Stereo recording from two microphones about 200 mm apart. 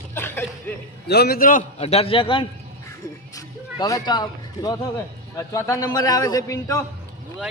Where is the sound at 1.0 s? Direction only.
55° left (ahead or behind).